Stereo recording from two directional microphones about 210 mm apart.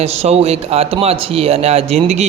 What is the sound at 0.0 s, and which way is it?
A man's voice, 30° right (ahead or behind).